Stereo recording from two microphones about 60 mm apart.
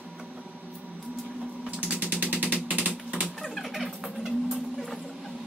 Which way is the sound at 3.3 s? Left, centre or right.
Centre.